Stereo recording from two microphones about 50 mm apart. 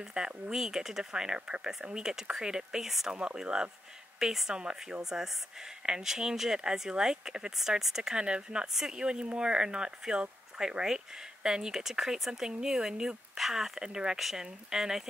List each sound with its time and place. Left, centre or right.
0.0 s speech: centre
3.1 s speech: centre